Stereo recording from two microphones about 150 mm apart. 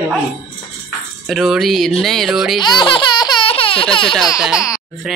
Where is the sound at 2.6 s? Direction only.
30° left (ahead or behind).